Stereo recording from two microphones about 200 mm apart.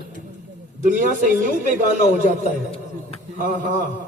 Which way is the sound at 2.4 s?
30° left (ahead or behind).